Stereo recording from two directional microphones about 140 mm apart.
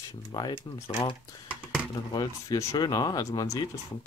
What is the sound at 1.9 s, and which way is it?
Speech, 30° left (ahead or behind).